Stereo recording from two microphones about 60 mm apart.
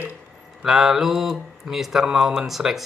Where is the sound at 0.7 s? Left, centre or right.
Centre.